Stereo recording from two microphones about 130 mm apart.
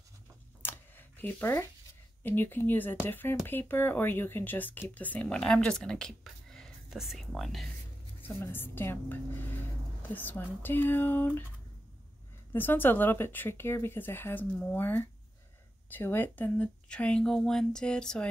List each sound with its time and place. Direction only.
0.6 s a sound: 15° left (ahead or behind)
2.2 s speech: 15° left (ahead or behind); by 7.7 s centre (ahead or behind)
8.2 s speech: 15° left (ahead or behind)
12.5 s speech: 15° left (ahead or behind)